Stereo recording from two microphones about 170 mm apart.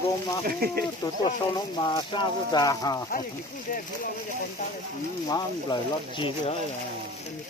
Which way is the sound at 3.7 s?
55° left (ahead or behind).